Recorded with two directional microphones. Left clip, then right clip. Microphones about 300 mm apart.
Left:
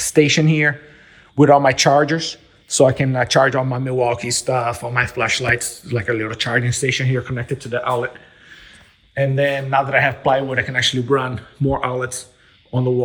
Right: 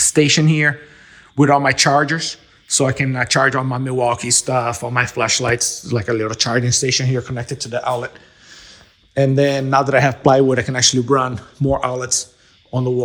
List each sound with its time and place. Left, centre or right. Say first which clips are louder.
0.0 s speech: even; centre
5.5 s speech: right 6 dB; centre
5.9 s speech: left 1 dB; centre
9.6 s a man's voice: right 2 dB; centre
9.9 s a man's voice: right 3 dB; right
10.7 s speech: right 2 dB; centre